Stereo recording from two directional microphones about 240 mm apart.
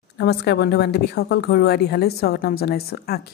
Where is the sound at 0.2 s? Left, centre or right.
Left.